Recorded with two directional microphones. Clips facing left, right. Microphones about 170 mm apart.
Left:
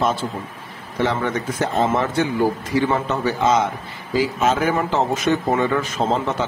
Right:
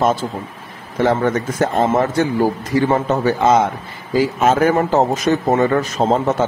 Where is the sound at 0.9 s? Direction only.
45° right (ahead or behind).